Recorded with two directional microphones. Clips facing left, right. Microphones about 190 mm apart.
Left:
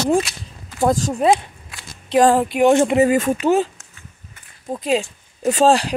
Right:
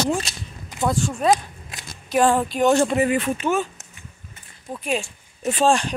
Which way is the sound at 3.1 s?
45° left (ahead or behind).